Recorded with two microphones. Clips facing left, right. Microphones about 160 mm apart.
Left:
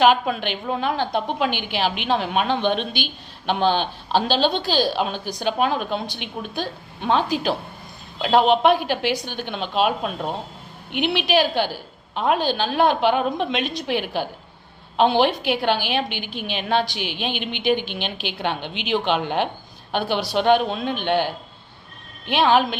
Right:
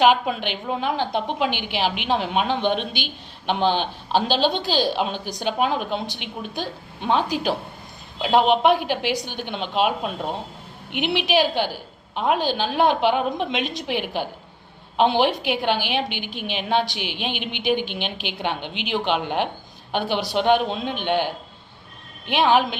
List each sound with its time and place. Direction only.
0.4 s a woman's voice: 15° right (ahead or behind)